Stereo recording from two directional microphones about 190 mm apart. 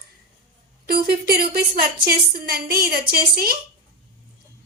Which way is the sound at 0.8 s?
55° right (ahead or behind).